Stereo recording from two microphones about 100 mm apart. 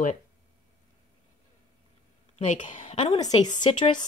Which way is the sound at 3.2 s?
40° left (ahead or behind).